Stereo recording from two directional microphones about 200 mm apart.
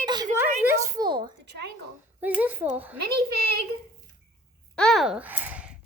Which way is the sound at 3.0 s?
55° right (ahead or behind).